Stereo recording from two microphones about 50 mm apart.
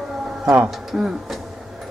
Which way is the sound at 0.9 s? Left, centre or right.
Centre.